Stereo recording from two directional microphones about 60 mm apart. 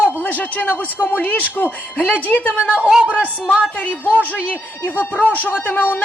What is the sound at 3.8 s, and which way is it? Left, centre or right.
A man's voice, left.